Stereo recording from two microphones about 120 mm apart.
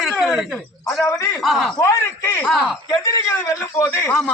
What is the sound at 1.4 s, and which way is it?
Speech, centre (ahead or behind).